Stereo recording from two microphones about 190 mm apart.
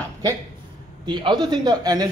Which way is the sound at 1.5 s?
20° right (ahead or behind).